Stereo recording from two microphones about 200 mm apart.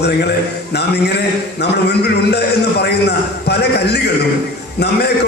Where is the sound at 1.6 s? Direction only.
55° left (ahead or behind).